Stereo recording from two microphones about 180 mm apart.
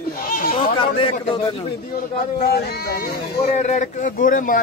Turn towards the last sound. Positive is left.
turn(degrees=50)  # may be behind; listen again after turning